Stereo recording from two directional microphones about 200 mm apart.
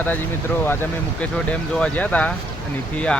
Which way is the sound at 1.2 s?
5° left (ahead or behind).